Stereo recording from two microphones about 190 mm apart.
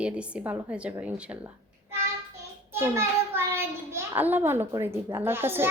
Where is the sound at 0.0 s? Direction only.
5° right (ahead or behind).